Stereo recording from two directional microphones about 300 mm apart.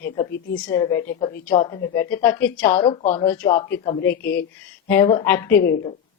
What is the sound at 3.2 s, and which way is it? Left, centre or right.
Speech, centre.